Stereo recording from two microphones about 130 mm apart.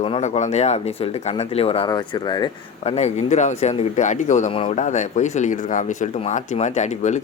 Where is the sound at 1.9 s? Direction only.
35° left (ahead or behind).